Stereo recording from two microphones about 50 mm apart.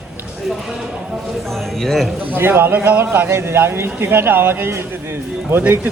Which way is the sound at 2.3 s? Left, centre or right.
Right.